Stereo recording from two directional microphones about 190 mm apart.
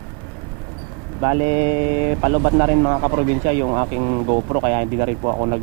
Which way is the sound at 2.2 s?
25° right (ahead or behind).